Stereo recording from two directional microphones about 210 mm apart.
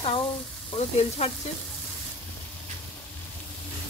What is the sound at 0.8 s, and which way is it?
Frying, 30° left (ahead or behind).